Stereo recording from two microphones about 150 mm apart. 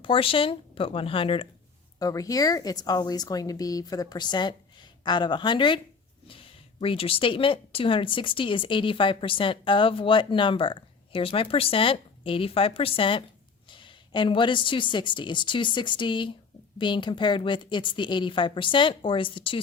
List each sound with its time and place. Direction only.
0.0 s speech: 35° left (ahead or behind)
2.0 s speech: 25° left (ahead or behind)